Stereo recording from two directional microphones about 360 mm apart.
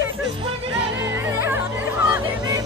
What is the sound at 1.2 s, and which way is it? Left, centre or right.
Music, centre.